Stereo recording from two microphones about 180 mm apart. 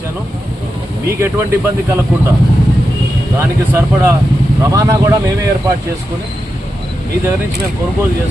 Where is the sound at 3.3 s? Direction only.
15° right (ahead or behind).